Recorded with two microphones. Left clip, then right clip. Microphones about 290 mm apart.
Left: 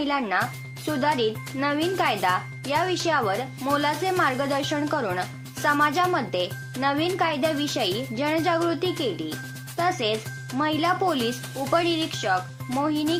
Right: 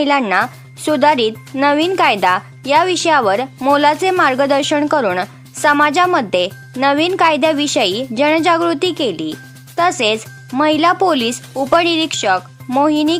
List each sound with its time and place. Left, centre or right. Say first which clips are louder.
0.0 s speech: right 11 dB; right